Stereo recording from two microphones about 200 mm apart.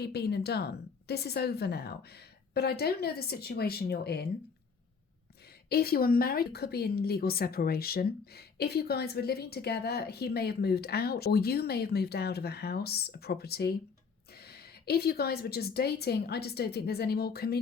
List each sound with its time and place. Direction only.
0.0 s speech: 55° left (ahead or behind)
5.6 s speech: 50° left (ahead or behind)